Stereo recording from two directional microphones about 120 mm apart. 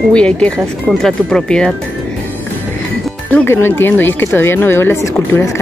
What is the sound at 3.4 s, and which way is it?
Speech, 20° left (ahead or behind).